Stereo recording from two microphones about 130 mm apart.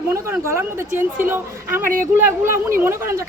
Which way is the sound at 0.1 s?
20° right (ahead or behind).